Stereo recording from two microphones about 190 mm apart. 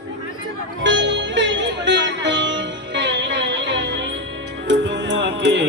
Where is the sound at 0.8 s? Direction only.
75° right (ahead or behind).